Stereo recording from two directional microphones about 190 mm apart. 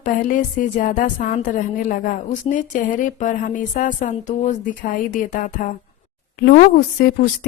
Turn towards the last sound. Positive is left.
turn(degrees=55)  # may be behind; listen again after turning